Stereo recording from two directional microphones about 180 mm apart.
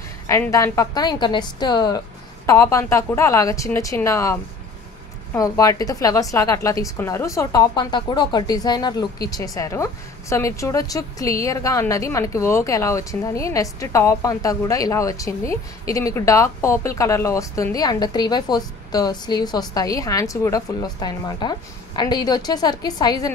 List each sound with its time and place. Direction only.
0.3 s a woman's voice: 20° left (ahead or behind)